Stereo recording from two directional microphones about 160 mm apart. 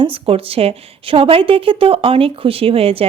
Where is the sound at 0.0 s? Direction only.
35° right (ahead or behind).